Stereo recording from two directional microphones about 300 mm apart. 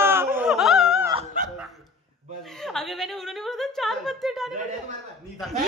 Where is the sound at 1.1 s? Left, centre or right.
Centre.